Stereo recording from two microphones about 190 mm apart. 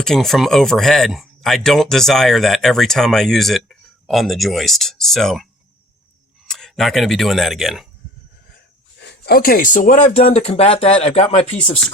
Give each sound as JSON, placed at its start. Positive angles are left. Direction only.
{"t": 0.0, "sound": "speech", "side_deg": 0}
{"t": 9.0, "sound": "speech", "side_deg": 60}